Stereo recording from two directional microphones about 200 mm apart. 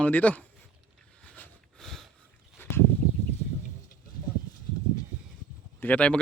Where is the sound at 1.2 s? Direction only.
5° left (ahead or behind).